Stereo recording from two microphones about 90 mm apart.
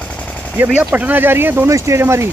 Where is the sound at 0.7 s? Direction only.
15° right (ahead or behind).